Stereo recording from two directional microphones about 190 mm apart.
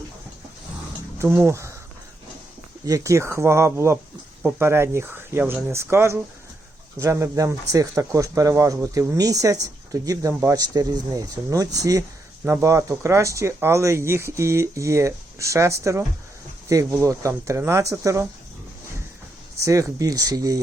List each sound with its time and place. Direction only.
1.2 s speech: 10° right (ahead or behind)
2.8 s speech: 15° right (ahead or behind)
19.5 s speech: 15° right (ahead or behind)